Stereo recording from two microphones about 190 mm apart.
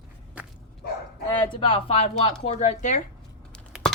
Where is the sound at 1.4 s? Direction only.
25° left (ahead or behind).